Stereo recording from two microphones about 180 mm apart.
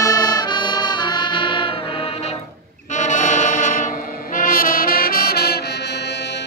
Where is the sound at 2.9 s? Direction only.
45° left (ahead or behind).